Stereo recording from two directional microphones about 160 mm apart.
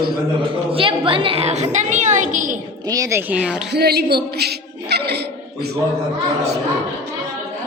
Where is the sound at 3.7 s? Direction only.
90° right.